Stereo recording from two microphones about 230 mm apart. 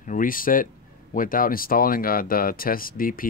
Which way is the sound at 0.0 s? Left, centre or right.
Left.